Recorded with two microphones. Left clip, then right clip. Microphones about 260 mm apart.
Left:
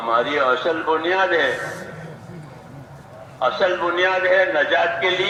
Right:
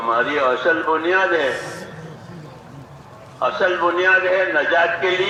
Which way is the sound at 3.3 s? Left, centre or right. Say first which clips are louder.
Right 1 dB; left.